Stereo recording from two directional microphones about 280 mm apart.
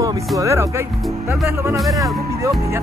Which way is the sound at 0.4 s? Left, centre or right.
Centre.